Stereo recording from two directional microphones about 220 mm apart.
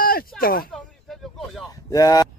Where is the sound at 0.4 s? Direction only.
40° left (ahead or behind).